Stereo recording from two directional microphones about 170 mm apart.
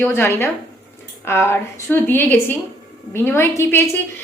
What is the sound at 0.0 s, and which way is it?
A woman's voice, 15° left (ahead or behind).